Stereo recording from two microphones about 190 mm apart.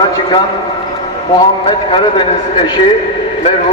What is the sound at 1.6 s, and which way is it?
A man's voice, 25° left (ahead or behind).